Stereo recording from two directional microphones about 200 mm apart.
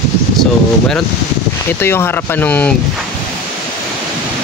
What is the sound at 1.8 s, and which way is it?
Speech, 10° left (ahead or behind).